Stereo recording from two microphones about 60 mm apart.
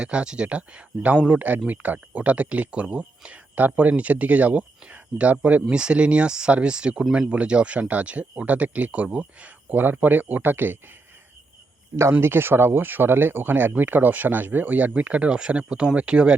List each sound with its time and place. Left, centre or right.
0.0 s speech: centre; by 10.8 s right
12.2 s speech: right; by 16.3 s centre